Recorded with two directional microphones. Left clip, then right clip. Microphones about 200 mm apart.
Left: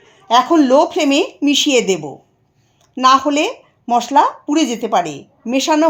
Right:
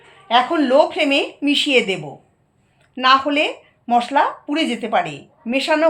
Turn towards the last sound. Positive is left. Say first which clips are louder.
# left 3 dB
turn(degrees=50)  # may be behind; listen again after turning